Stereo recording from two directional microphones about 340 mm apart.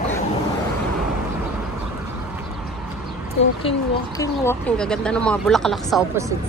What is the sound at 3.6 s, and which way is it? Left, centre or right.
Speech, centre.